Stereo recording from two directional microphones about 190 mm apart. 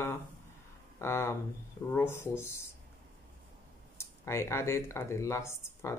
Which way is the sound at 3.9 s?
15° left (ahead or behind).